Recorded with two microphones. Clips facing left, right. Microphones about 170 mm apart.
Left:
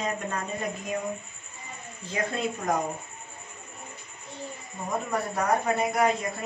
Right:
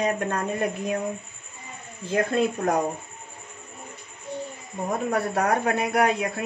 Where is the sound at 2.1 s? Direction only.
60° right (ahead or behind).